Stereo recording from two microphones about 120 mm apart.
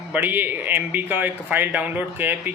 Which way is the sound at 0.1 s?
15° right (ahead or behind).